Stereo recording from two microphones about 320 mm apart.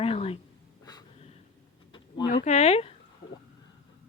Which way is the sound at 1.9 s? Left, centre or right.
Centre.